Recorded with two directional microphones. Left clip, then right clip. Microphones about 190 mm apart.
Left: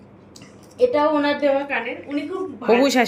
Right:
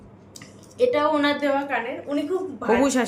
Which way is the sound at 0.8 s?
25° right (ahead or behind).